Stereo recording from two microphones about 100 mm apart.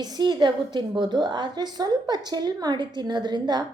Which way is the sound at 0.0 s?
45° right (ahead or behind).